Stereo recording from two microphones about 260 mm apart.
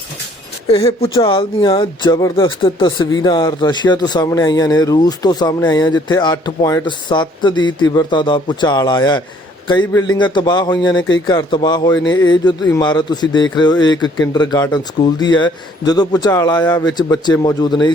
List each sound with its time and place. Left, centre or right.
0.7 s speech: left